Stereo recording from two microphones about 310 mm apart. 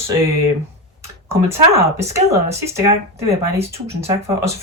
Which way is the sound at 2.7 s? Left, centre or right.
Centre.